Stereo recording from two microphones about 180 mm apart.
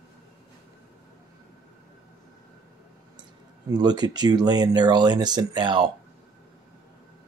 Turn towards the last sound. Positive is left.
turn(degrees=-25)  # may be behind; listen again after turning